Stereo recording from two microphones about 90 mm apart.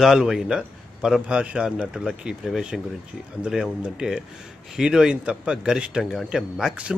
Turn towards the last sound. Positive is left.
turn(degrees=-10)  # may be behind; listen again after turning